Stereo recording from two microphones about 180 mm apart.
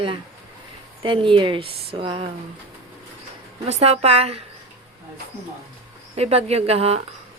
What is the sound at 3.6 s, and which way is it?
Speech, 35° right (ahead or behind).